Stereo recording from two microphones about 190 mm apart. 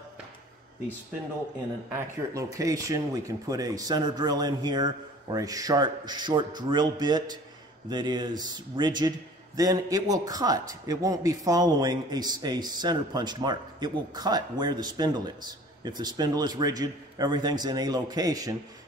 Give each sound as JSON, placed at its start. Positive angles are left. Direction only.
{"t": 1.9, "sound": "speech", "side_deg": -15}